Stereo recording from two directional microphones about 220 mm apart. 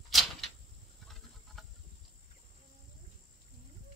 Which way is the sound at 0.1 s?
Centre (ahead or behind).